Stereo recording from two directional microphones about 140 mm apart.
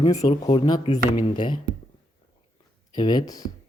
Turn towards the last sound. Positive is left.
turn(degrees=30)  # may be behind; listen again after turning